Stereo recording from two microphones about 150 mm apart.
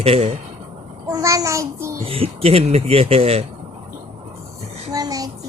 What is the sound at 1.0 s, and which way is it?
Speech, 25° right (ahead or behind).